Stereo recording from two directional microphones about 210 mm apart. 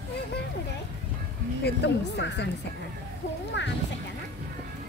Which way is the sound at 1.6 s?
55° left (ahead or behind).